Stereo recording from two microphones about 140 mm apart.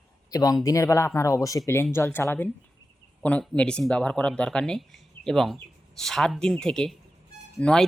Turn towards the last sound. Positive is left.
turn(degrees=5)  # may be behind; listen again after turning